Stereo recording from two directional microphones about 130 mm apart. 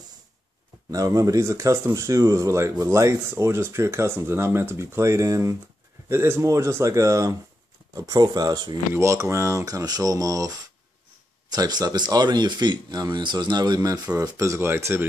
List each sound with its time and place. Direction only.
0.9 s speech: 25° right (ahead or behind)
11.5 s speech: 30° right (ahead or behind)